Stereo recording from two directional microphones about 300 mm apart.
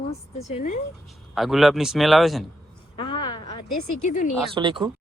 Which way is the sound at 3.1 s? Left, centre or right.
Left.